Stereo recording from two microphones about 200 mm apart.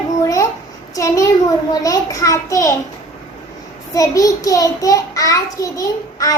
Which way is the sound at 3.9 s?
15° left (ahead or behind).